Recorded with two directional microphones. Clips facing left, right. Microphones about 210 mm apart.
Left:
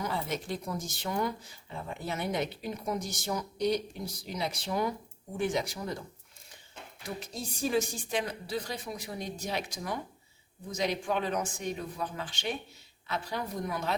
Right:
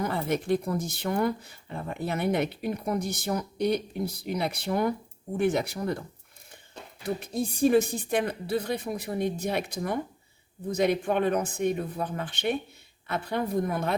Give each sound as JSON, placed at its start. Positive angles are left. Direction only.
{"t": 0.0, "sound": "speech", "side_deg": -55}
{"t": 7.2, "sound": "speech", "side_deg": -55}